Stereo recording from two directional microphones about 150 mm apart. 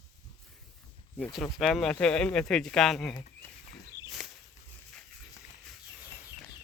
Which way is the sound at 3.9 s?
25° left (ahead or behind).